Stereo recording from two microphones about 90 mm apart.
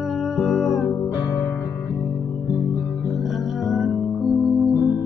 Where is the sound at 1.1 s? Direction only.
45° left (ahead or behind).